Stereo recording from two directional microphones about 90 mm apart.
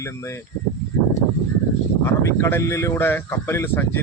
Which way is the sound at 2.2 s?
30° left (ahead or behind).